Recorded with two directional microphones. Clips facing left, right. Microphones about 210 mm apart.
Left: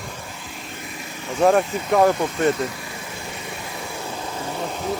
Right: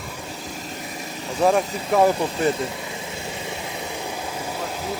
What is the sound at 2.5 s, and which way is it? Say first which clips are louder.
Vehicle: left 1 dB; 25° right (ahead or behind).